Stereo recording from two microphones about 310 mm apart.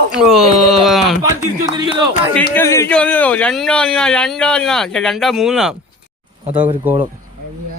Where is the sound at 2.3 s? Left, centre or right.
Centre.